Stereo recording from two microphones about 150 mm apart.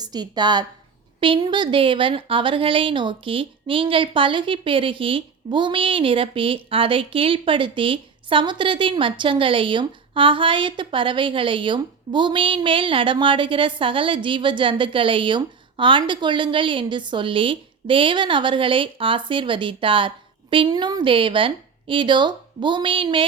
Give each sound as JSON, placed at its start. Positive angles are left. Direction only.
{"t": 0.0, "sound": "a woman's voice", "side_deg": -25}